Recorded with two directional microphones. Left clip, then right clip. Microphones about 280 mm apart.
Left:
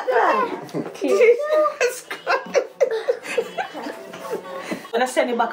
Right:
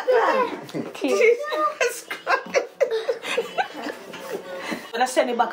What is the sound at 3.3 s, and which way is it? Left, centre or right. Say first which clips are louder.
Chuckle: even; centre.